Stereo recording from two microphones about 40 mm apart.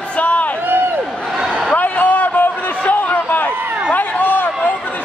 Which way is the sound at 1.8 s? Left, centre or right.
Left.